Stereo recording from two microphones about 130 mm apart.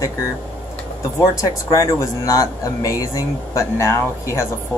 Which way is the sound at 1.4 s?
25° left (ahead or behind).